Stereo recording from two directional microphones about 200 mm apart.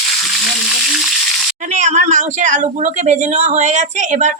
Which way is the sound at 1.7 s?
35° right (ahead or behind).